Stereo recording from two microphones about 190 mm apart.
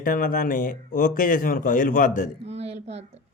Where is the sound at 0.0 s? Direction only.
45° left (ahead or behind).